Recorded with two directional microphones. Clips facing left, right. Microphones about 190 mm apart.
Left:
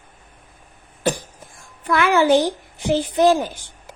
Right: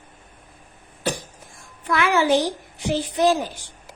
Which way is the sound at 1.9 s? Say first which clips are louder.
Left 3 dB; 50° left (ahead or behind).